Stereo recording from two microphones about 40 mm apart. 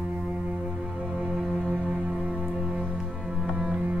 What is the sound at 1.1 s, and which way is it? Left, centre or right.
Music, centre.